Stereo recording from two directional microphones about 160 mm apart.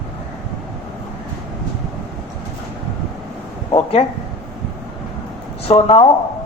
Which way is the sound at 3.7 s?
35° left (ahead or behind).